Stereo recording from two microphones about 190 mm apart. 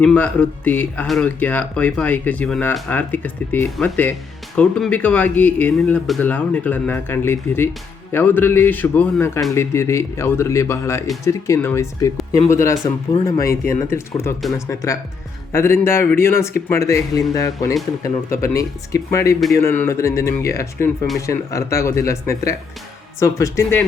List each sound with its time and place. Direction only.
0.0 s speech: 5° left (ahead or behind)
13.1 s speech: 35° left (ahead or behind)
13.5 s speech: 15° left (ahead or behind)